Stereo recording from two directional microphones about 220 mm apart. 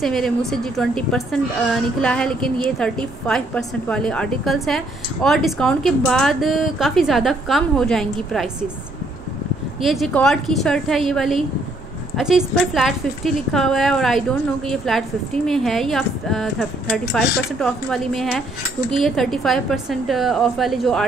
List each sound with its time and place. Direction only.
0.0 s a woman's voice: centre (ahead or behind)
9.8 s a woman's voice: centre (ahead or behind)